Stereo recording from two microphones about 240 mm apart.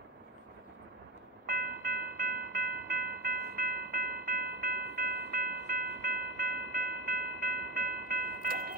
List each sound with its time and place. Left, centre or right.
1.4 s train: right